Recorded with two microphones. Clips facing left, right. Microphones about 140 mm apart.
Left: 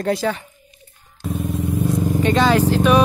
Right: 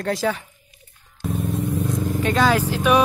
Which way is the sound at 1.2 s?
Centre (ahead or behind).